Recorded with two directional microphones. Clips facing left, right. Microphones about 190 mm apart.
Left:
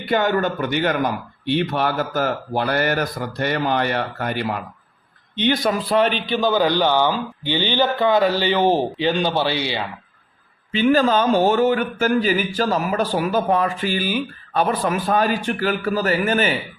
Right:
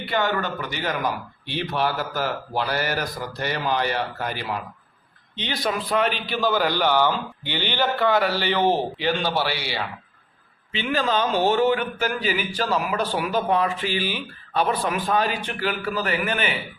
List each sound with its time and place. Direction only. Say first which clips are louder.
0.0 s speech: left 5 dB; 45° left (ahead or behind)
5.9 s a man's voice: left 5 dB; 30° left (ahead or behind)
6.3 s a man's voice: left 4 dB; 20° left (ahead or behind)
10.7 s speech: left 8 dB; 45° left (ahead or behind)